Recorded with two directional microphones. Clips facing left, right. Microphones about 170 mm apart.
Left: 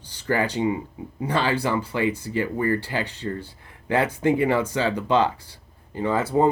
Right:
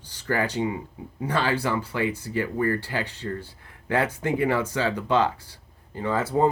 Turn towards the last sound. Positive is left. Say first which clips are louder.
# left 3 dB
turn(degrees=15)  # may be behind; listen again after turning